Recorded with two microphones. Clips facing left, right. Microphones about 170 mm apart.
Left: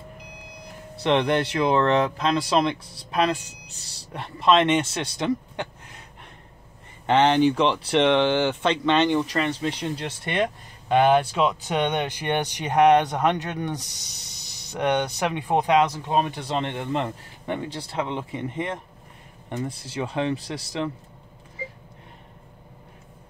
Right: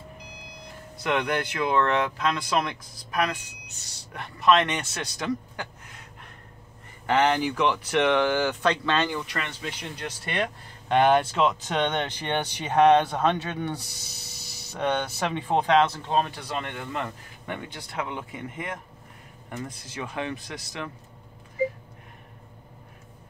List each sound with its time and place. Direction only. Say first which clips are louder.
0.9 s speech: left 5 dB; 30° left (ahead or behind)
7.1 s speech: left 5 dB; 25° left (ahead or behind)
9.2 s speech: left 9 dB; 35° left (ahead or behind)
10.9 s speech: left 2 dB; 10° left (ahead or behind)
14.4 s spray: right 2 dB; 5° right (ahead or behind)
14.7 s speech: left 3 dB; 15° left (ahead or behind); by 20.9 s 30° left (ahead or behind)